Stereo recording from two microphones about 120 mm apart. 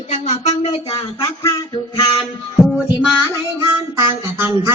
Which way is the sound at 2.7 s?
5° right (ahead or behind).